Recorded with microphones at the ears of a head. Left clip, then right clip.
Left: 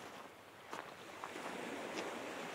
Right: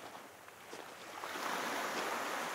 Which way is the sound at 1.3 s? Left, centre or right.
Right.